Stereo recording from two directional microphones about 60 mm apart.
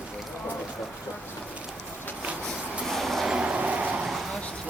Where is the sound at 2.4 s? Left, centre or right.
Centre.